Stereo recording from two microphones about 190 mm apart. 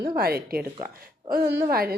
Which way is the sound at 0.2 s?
55° right (ahead or behind).